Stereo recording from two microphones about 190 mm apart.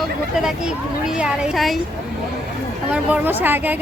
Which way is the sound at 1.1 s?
5° right (ahead or behind).